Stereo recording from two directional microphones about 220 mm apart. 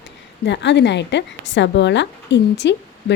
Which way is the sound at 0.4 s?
50° left (ahead or behind).